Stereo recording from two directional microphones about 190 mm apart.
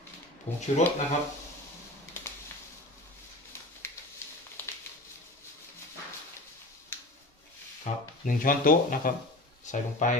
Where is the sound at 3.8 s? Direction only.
15° left (ahead or behind).